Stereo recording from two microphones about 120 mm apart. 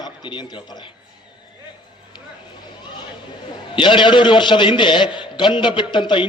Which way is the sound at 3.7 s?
40° left (ahead or behind).